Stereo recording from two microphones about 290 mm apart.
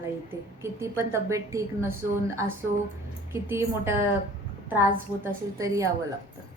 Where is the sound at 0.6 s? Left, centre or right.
Centre.